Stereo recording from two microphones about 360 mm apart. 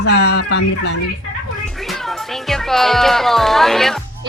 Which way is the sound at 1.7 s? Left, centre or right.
Centre.